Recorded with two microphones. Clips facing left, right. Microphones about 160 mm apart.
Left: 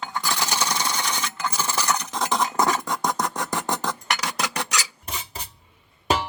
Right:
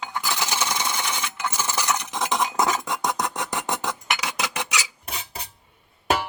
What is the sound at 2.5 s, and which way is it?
Cutlery, centre (ahead or behind).